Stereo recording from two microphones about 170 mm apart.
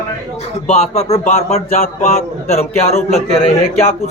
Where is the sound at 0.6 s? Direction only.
40° left (ahead or behind).